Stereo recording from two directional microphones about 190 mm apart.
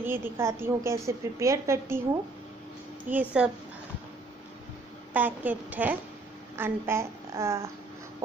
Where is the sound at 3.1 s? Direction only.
40° right (ahead or behind).